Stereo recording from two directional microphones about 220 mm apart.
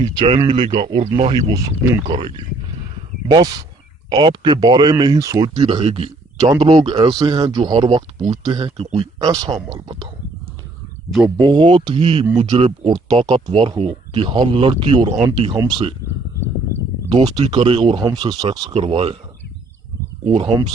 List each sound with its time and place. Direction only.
0.0 s speech: 20° right (ahead or behind)
11.3 s speech: 20° right (ahead or behind)
17.1 s speech: 20° right (ahead or behind)
20.2 s speech: 25° right (ahead or behind)